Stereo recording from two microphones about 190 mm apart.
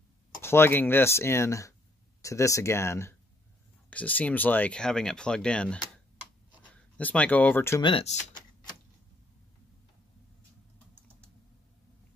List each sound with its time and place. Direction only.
0.4 s speech: 10° left (ahead or behind)
7.8 s speech: 30° left (ahead or behind)